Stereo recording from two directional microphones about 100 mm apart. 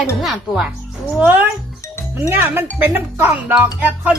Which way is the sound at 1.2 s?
20° right (ahead or behind).